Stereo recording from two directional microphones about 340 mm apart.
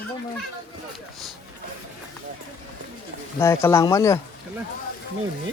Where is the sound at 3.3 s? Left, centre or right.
Centre.